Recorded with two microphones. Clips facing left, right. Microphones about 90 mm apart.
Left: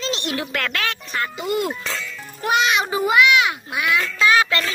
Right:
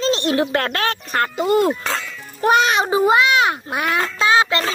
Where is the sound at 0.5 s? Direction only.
35° right (ahead or behind).